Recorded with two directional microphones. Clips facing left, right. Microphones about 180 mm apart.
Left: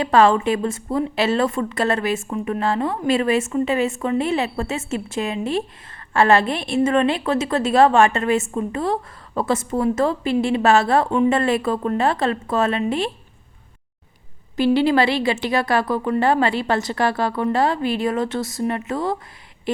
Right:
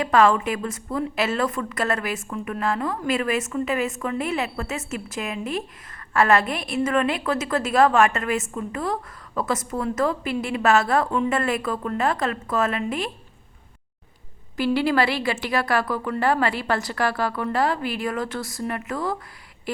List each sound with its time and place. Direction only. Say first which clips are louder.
0.0 s a woman's voice: left 3 dB; 30° left (ahead or behind)
14.5 s a woman's voice: left 4 dB; 20° left (ahead or behind)
19.7 s a sound: left 6 dB; 20° left (ahead or behind)